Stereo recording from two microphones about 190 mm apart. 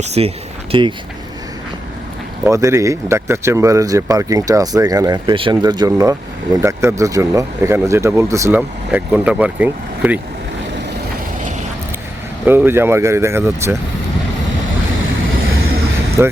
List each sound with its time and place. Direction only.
0.0 s speech: 35° right (ahead or behind)
2.4 s speech: 15° right (ahead or behind)
12.5 s speech: 10° right (ahead or behind)
16.2 s speech: 10° right (ahead or behind)